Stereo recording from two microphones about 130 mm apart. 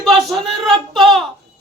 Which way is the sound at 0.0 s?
Centre (ahead or behind).